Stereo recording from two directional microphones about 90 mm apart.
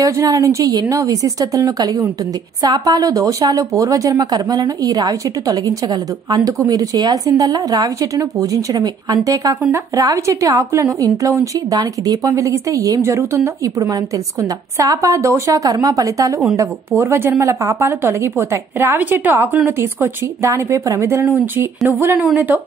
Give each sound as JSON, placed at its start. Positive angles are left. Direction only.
{"t": 0.0, "sound": "a woman's voice", "side_deg": -40}
{"t": 16.5, "sound": "speech", "side_deg": -30}